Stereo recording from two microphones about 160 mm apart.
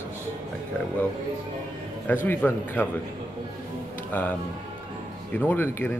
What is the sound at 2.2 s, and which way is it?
Speech, 10° left (ahead or behind).